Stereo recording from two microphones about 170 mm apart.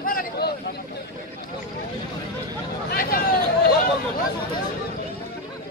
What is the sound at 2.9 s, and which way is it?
Hubbub, 55° left (ahead or behind).